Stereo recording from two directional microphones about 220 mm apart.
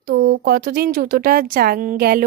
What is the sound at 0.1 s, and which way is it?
A woman's voice, 45° right (ahead or behind).